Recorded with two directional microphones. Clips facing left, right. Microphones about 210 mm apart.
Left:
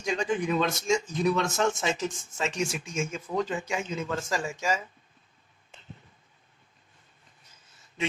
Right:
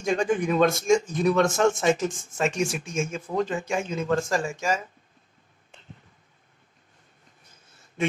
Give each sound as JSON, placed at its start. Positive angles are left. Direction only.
{"t": 0.0, "sound": "speech", "side_deg": -50}